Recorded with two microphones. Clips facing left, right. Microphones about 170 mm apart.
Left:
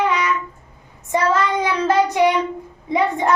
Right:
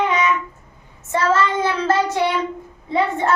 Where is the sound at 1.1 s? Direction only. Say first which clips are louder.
Even; 15° left (ahead or behind).